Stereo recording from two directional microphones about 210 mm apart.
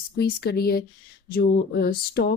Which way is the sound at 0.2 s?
50° left (ahead or behind).